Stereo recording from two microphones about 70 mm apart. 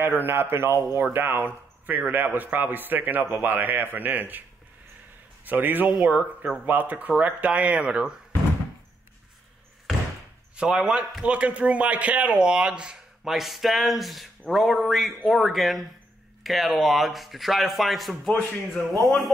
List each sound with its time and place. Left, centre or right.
0.0 s a man's voice: right
5.4 s a man's voice: right
5.9 s speech: centre
6.6 s a man's voice: right
10.5 s speech: centre